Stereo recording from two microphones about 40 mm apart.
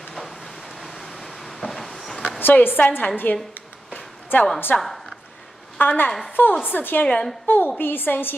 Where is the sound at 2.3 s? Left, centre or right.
Left.